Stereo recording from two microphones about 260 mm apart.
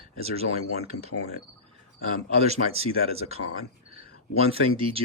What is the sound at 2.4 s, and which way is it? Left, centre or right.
Speech, right.